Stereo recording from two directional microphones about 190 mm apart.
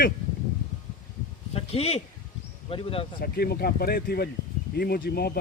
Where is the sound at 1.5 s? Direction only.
30° left (ahead or behind).